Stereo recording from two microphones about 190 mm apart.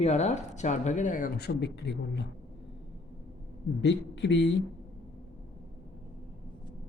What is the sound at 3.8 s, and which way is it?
Speech, 70° left (ahead or behind).